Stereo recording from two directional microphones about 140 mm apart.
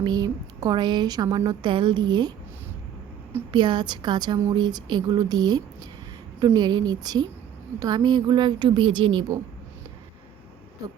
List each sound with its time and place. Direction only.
0.0 s a woman's voice: 30° right (ahead or behind)
3.5 s a woman's voice: 35° right (ahead or behind)